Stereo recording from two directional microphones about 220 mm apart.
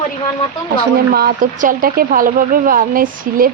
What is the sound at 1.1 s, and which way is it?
Speech, 45° right (ahead or behind).